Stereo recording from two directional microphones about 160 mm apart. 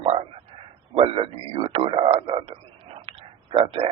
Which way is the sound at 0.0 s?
35° right (ahead or behind).